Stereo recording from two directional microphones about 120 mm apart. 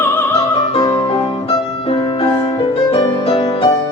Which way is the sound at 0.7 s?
45° left (ahead or behind).